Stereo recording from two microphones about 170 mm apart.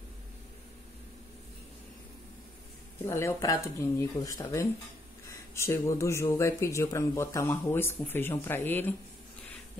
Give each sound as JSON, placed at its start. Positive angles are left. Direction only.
{"t": 3.1, "sound": "speech", "side_deg": 15}